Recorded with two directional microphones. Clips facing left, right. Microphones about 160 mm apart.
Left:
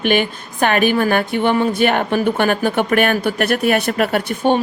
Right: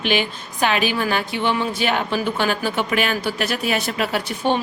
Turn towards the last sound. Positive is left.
turn(degrees=50)  # may be behind; listen again after turning